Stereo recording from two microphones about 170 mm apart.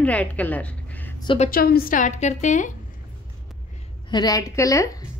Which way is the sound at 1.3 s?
55° left (ahead or behind).